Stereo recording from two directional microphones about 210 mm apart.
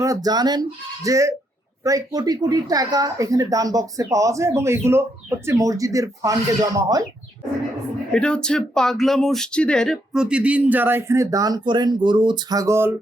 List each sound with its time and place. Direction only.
0.0 s speech: 15° right (ahead or behind)
8.1 s speech: 5° left (ahead or behind); by 12.9 s 15° right (ahead or behind)